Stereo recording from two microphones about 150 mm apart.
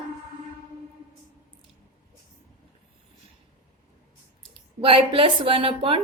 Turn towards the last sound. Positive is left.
turn(degrees=-35)  # may be behind; listen again after turning